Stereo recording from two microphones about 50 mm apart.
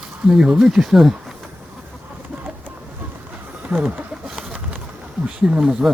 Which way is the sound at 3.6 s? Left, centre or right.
Right.